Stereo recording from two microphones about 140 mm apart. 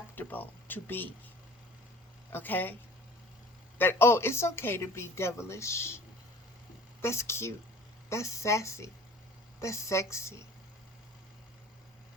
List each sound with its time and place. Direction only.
0.2 s speech: 15° left (ahead or behind)
2.3 s speech: 15° left (ahead or behind)
3.8 s speech: 15° left (ahead or behind)
7.0 s speech: 20° left (ahead or behind)